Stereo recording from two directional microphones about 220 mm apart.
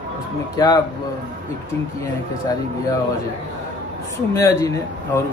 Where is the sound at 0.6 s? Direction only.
20° left (ahead or behind).